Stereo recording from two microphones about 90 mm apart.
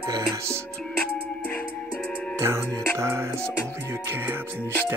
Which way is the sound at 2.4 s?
30° right (ahead or behind).